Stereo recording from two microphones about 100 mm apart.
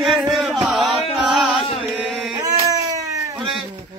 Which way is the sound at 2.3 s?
35° right (ahead or behind).